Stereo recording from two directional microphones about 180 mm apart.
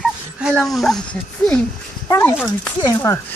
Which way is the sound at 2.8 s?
20° left (ahead or behind).